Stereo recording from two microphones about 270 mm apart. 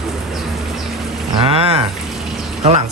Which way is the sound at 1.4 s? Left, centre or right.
Right.